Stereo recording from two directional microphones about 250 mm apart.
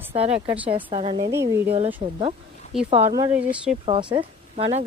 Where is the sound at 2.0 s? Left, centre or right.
Right; by 3.8 s centre.